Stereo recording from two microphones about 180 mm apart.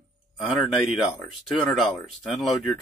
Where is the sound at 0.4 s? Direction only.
Centre (ahead or behind).